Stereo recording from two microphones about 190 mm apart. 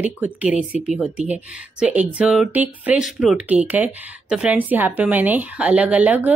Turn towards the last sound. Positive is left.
turn(degrees=-10)  # may be behind; listen again after turning